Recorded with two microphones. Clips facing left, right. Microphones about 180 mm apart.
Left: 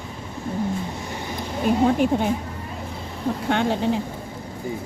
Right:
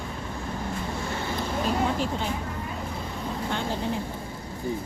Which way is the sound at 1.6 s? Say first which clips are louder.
Left 10 dB; 55° left (ahead or behind).